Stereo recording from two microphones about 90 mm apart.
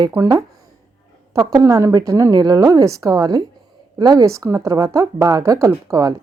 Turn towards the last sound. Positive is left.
turn(degrees=-40)  # may be behind; listen again after turning